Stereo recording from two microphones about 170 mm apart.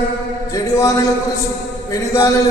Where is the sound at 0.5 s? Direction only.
20° left (ahead or behind).